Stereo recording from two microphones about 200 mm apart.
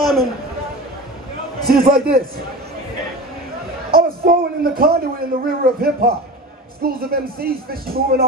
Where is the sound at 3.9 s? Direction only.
50° right (ahead or behind).